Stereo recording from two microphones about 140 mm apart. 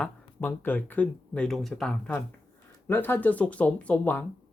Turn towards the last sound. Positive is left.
turn(degrees=10)  # may be behind; listen again after turning